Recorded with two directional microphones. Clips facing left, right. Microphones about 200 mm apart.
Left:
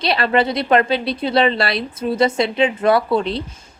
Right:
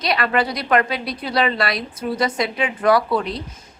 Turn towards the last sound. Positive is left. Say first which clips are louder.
# left 3 dB
turn(degrees=30)  # may be behind; listen again after turning